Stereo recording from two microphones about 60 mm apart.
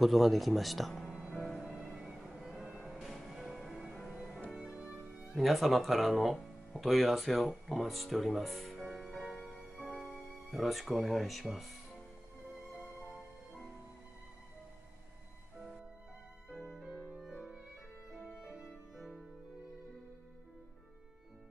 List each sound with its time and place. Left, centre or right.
0.0 s speech: centre
1.8 s music: centre
5.4 s speech: centre
9.8 s music: centre
16.6 s music: centre